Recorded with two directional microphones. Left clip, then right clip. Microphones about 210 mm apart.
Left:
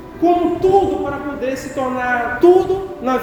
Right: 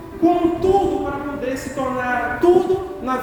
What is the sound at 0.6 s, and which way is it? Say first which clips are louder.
A man's voice: left 5 dB; 30° left (ahead or behind).